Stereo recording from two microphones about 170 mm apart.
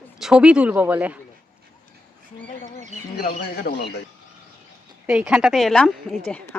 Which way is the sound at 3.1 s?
60° left (ahead or behind).